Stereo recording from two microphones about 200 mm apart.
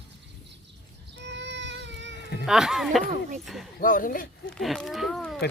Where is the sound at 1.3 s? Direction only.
60° right (ahead or behind).